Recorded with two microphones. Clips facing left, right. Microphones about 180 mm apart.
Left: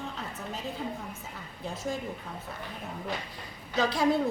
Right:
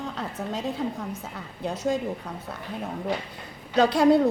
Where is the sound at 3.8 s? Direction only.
65° right (ahead or behind).